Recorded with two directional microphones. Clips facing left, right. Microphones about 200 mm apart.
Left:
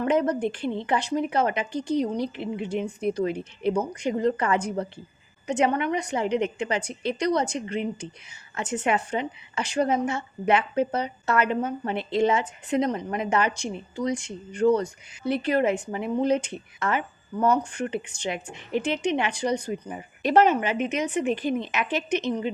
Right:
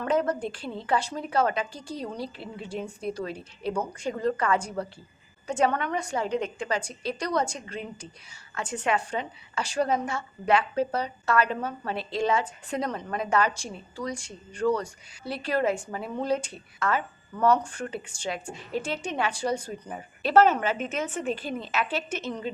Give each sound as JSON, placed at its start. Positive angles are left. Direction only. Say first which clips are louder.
{"t": 0.0, "sound": "a woman's voice", "louder": "left 3 dB", "side_deg": 20}